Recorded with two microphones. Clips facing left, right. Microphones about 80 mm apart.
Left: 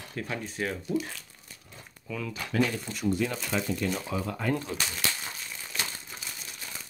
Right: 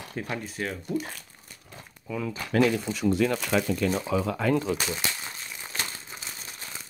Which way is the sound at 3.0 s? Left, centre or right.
Right.